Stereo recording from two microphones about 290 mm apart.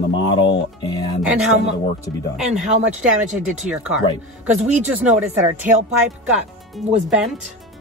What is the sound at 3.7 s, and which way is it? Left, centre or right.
Speech, centre.